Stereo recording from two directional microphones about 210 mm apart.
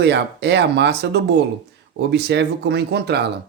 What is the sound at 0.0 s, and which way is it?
Speech, 55° right (ahead or behind).